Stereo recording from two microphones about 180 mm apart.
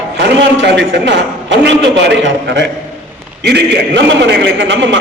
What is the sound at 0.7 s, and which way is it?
A man's voice, 75° right (ahead or behind).